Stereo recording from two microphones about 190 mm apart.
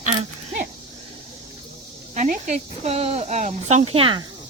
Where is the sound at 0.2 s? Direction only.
40° right (ahead or behind).